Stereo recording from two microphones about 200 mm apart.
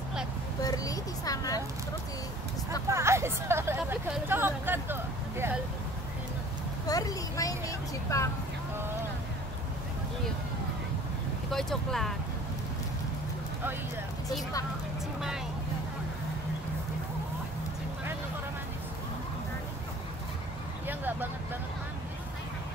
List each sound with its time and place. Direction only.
0.6 s a sound: 20° left (ahead or behind)
2.9 s speech: 15° right (ahead or behind)
6.9 s speech: 15° left (ahead or behind)
11.5 s speech: centre (ahead or behind)
20.8 s vehicle: 10° right (ahead or behind)